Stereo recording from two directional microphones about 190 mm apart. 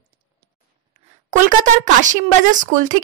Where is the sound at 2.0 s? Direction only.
40° right (ahead or behind).